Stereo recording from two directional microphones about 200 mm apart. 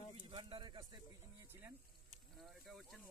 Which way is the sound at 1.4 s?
10° right (ahead or behind).